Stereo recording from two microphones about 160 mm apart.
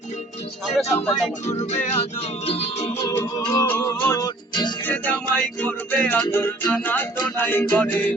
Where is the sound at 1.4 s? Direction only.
45° left (ahead or behind).